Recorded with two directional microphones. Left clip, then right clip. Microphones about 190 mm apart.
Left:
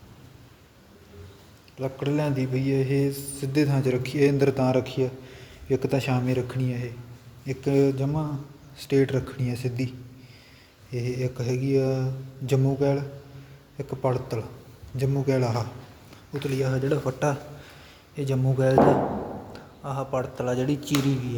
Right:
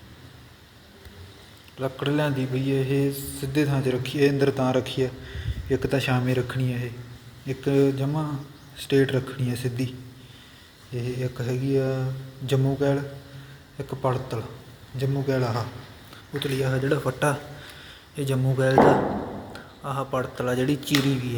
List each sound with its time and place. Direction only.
1.8 s speech: 5° left (ahead or behind)
10.9 s speech: 15° left (ahead or behind)
16.4 s speech: 5° left (ahead or behind)